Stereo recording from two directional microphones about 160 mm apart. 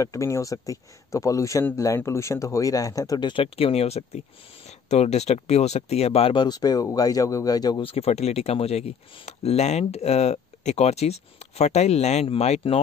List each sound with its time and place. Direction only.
0.0 s a man's voice: 20° left (ahead or behind)
7.8 s speech: 40° left (ahead or behind)